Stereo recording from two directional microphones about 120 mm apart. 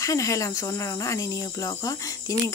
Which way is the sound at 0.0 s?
25° left (ahead or behind).